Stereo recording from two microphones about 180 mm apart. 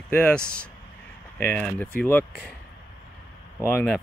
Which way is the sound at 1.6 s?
10° left (ahead or behind).